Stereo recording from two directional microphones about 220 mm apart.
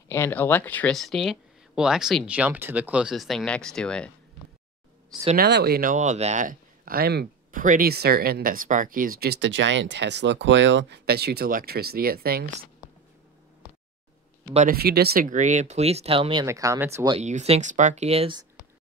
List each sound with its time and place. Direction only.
0.1 s speech: 10° left (ahead or behind)
5.4 s speech: 45° right (ahead or behind)
14.5 s speech: 35° right (ahead or behind); by 17.2 s 15° right (ahead or behind)
17.2 s speech: 30° right (ahead or behind)